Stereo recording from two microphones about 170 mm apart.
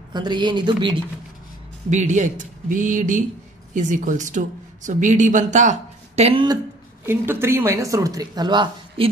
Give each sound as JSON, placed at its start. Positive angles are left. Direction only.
{"t": 0.1, "sound": "speech", "side_deg": -25}
{"t": 1.9, "sound": "speech", "side_deg": -45}
{"t": 7.1, "sound": "speech", "side_deg": -15}